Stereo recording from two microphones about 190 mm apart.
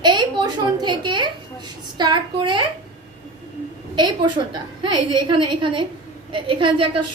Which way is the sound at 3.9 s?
25° right (ahead or behind).